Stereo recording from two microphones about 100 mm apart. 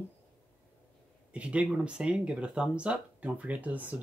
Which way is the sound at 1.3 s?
10° right (ahead or behind).